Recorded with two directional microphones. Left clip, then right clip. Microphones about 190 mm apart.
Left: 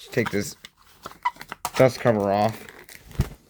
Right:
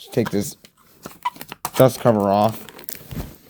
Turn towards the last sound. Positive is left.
turn(degrees=-65)  # may be behind; listen again after turning